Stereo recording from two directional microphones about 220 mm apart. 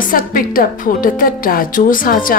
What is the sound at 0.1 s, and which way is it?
Speech, 40° left (ahead or behind).